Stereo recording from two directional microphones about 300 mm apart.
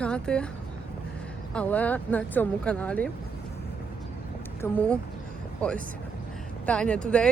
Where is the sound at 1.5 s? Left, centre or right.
Centre.